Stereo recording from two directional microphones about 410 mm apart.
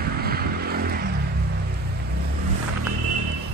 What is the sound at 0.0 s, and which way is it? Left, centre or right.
Vehicle, right.